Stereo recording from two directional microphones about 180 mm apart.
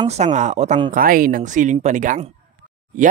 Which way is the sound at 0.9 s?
55° right (ahead or behind).